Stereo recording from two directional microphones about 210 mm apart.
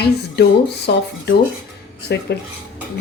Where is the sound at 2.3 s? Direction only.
50° left (ahead or behind).